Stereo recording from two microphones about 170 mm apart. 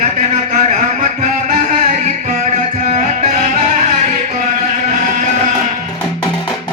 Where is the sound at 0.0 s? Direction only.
45° right (ahead or behind).